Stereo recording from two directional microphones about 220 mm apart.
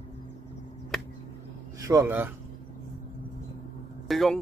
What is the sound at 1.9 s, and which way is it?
Speech, 10° right (ahead or behind).